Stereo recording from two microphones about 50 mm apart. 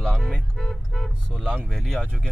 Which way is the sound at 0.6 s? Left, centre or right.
Centre.